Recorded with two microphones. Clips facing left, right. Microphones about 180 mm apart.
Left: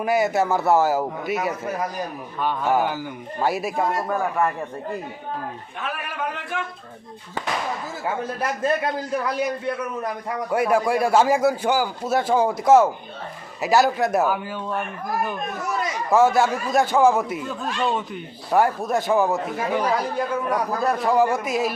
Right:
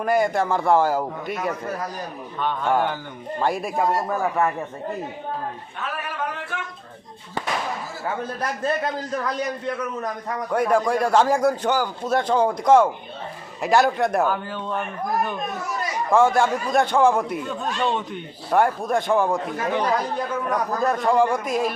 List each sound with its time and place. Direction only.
0.0 s a man's voice: 5° left (ahead or behind)
9.1 s a man's voice: 10° left (ahead or behind)